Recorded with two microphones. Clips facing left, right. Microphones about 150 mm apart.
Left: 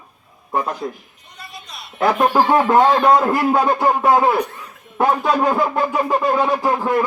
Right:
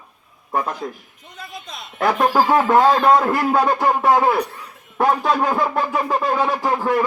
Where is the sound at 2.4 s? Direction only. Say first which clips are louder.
Even; centre (ahead or behind).